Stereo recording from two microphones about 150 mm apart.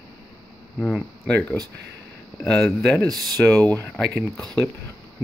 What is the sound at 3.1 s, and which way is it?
Speech, 25° right (ahead or behind).